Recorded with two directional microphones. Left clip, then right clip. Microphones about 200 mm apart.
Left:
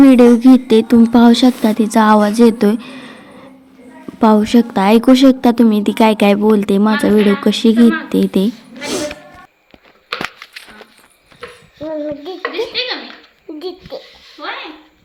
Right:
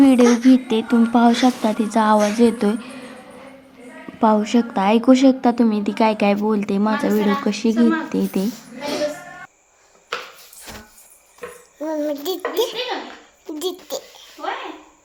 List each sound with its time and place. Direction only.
0.0 s a woman's voice: 25° left (ahead or behind)
4.2 s a woman's voice: 25° left (ahead or behind)
11.8 s child singing: 15° right (ahead or behind)
12.5 s a child's voice: 20° right (ahead or behind)
13.6 s a sound: 20° right (ahead or behind)